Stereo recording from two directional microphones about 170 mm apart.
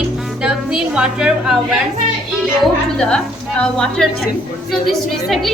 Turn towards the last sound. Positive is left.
turn(degrees=0)  # may be behind; listen again after turning